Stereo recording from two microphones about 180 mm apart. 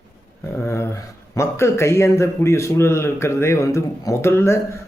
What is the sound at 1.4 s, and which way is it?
A man's voice, 15° left (ahead or behind).